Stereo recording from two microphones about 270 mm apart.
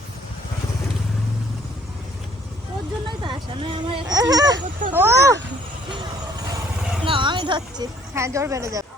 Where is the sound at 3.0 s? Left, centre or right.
Centre.